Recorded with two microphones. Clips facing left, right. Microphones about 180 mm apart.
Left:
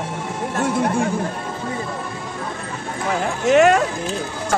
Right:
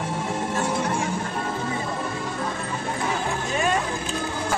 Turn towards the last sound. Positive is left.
turn(degrees=80)